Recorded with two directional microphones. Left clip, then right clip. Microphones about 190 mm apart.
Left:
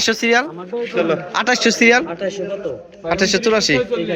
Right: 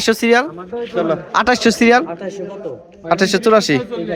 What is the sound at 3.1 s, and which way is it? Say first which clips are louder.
Speech: right 3 dB; 45° right (ahead or behind).